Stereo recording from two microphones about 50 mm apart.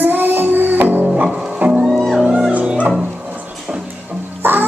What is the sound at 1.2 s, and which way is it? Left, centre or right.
Music, right.